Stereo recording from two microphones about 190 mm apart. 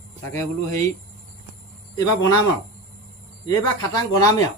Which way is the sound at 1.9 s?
20° left (ahead or behind).